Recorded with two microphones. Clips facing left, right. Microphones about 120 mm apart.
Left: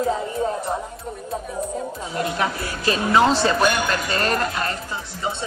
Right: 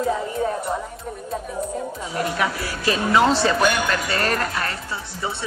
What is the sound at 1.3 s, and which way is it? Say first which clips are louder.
Music: even; centre (ahead or behind).